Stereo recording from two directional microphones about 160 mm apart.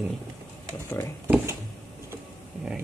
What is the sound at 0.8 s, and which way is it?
Speech, 15° left (ahead or behind).